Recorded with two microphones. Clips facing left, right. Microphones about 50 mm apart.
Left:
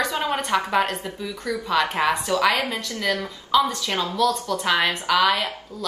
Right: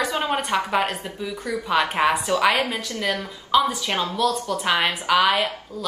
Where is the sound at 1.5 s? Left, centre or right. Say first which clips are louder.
Even; centre.